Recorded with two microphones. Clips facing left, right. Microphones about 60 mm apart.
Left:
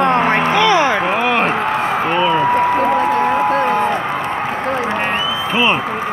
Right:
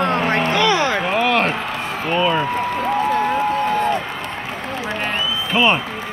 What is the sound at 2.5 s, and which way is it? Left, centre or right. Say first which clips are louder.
Applause: left 6 dB; left.